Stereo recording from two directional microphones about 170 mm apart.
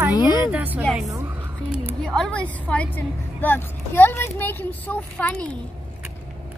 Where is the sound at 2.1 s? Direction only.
5° left (ahead or behind).